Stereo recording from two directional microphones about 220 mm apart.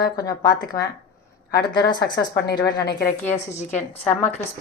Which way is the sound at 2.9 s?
45° left (ahead or behind).